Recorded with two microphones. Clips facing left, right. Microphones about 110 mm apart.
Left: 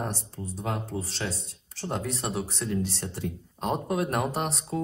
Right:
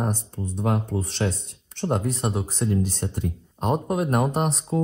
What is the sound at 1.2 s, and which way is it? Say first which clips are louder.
Speech: right 8 dB; 50° right (ahead or behind).